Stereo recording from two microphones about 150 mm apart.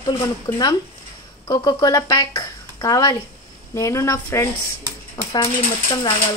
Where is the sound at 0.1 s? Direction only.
15° left (ahead or behind).